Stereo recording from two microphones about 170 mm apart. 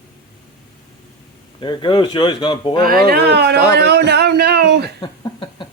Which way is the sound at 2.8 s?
60° right (ahead or behind).